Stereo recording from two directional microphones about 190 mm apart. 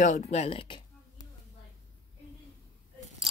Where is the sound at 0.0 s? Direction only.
40° left (ahead or behind).